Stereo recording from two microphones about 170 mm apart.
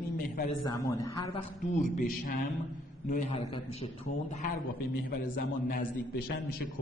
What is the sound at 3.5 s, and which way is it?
Speech, 30° left (ahead or behind).